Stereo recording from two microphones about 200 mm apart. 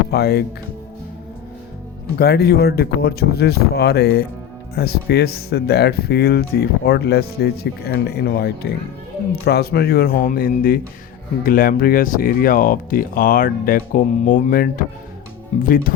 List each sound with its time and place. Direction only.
0.1 s speech: 55° left (ahead or behind)
2.1 s speech: 55° left (ahead or behind); by 15.7 s 35° left (ahead or behind)